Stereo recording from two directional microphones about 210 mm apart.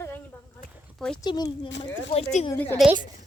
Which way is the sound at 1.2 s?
20° left (ahead or behind).